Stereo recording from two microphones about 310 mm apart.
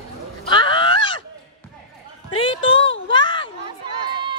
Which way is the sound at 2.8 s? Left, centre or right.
Left.